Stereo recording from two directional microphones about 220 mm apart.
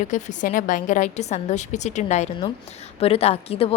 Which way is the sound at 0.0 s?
35° left (ahead or behind).